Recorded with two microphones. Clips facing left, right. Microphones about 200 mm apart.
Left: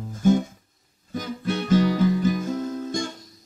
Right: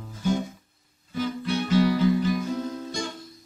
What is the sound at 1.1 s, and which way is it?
Guitar, 45° left (ahead or behind).